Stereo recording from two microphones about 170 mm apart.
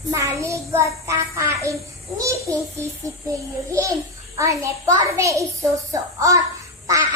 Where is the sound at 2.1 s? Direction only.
20° right (ahead or behind).